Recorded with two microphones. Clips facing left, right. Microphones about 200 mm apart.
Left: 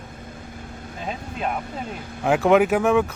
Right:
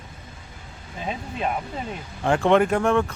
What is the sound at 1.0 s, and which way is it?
Speech, centre (ahead or behind).